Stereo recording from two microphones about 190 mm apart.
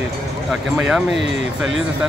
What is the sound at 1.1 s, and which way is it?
Speech, 70° right (ahead or behind).